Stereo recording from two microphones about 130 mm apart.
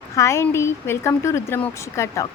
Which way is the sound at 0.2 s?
20° left (ahead or behind).